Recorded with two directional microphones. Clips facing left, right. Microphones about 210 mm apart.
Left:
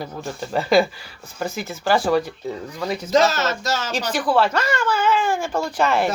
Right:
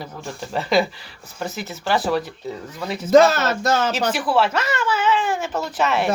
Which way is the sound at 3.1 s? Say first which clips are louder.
Right 5 dB; 55° right (ahead or behind).